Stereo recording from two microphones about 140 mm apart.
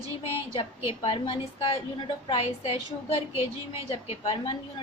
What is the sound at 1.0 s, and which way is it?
A woman's voice, 40° left (ahead or behind).